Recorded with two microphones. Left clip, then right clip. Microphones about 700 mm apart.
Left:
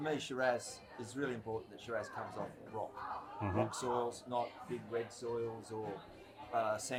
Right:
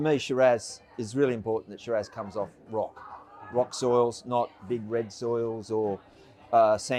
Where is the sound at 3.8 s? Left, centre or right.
Right.